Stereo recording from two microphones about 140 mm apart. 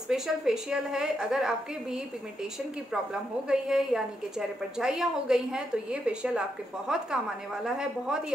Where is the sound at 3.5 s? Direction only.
5° right (ahead or behind).